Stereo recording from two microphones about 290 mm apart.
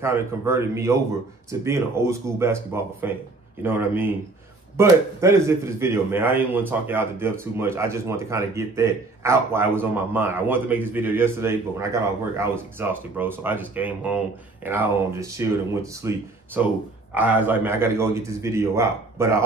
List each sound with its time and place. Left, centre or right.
0.0 s speech: centre